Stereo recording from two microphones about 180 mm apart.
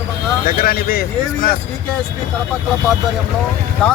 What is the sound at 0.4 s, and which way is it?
Speech, 50° left (ahead or behind).